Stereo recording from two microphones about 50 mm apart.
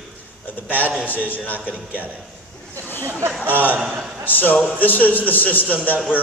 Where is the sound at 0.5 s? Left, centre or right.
Left.